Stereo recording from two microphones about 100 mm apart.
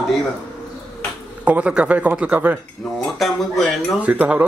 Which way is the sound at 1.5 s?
15° right (ahead or behind).